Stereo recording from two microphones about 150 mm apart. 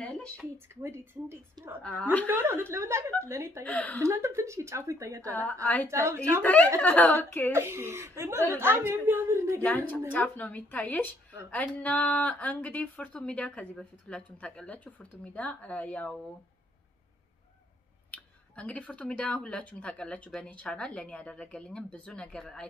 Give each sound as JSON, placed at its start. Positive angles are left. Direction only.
{"t": 0.0, "sound": "a sound", "side_deg": 10}
{"t": 0.8, "sound": "a woman's voice", "side_deg": -15}
{"t": 1.8, "sound": "speech", "side_deg": 10}
{"t": 2.2, "sound": "a woman's voice", "side_deg": -15}
{"t": 3.6, "sound": "speech", "side_deg": 10}
{"t": 4.0, "sound": "a woman's voice", "side_deg": -20}
{"t": 5.4, "sound": "speech", "side_deg": 10}
{"t": 5.9, "sound": "a woman's voice", "side_deg": -20}
{"t": 6.4, "sound": "speech", "side_deg": 10}
{"t": 7.5, "sound": "a woman's voice", "side_deg": -15}
{"t": 9.6, "sound": "speech", "side_deg": 10}
{"t": 18.1, "sound": "speech", "side_deg": 10}